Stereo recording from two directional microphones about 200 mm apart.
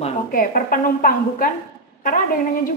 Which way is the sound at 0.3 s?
45° left (ahead or behind).